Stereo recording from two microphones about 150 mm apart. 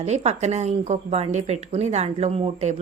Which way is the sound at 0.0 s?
45° right (ahead or behind).